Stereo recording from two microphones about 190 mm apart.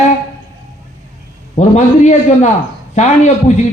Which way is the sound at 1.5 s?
35° left (ahead or behind).